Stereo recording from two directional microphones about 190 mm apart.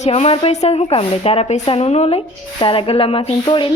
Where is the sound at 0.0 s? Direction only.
35° left (ahead or behind).